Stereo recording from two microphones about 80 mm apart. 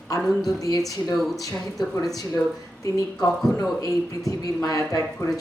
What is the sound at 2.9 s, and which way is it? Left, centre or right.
Speech, left.